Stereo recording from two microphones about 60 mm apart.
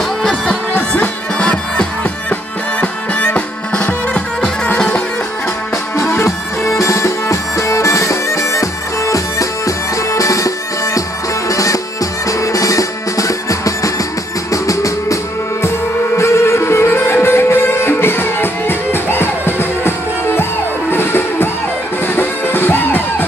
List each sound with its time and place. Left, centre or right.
0.2 s music: centre
0.7 s music: left
5.9 s music: left
16.2 s music: left